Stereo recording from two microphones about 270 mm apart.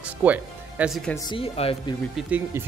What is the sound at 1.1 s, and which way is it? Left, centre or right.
Speech, centre.